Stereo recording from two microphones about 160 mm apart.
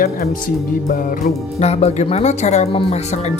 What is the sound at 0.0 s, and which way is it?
Speech, 60° left (ahead or behind).